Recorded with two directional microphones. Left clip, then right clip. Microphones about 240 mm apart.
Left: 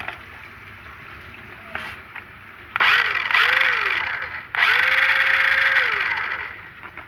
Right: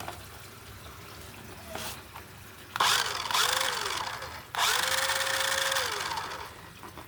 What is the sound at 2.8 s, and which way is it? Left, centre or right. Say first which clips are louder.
Vehicle: left 9 dB; centre.